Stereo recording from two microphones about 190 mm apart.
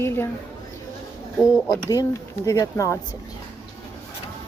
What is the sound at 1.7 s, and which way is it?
Speech, 20° left (ahead or behind).